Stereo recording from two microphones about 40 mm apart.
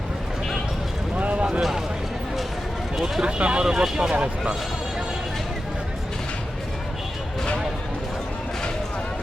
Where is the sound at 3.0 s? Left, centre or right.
Right.